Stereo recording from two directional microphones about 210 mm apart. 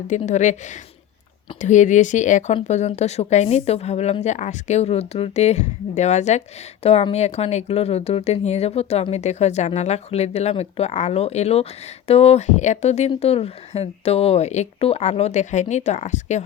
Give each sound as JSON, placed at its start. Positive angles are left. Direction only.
{"t": 0.1, "sound": "speech", "side_deg": 35}